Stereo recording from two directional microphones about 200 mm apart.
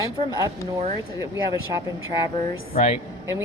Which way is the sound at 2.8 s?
35° left (ahead or behind).